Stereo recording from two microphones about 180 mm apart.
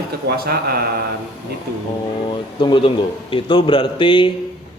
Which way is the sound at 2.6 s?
25° left (ahead or behind).